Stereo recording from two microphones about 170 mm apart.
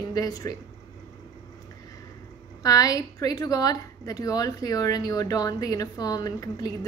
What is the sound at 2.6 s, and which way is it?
A woman's voice, 20° left (ahead or behind).